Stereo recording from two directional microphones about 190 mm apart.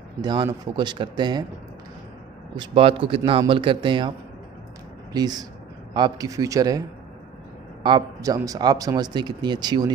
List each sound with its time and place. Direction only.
0.2 s speech: 25° right (ahead or behind)
2.5 s speech: 25° right (ahead or behind)
5.1 s speech: 20° right (ahead or behind)
7.8 s speech: 20° right (ahead or behind)